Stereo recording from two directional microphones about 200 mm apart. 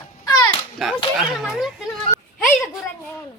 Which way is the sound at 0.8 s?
Centre (ahead or behind).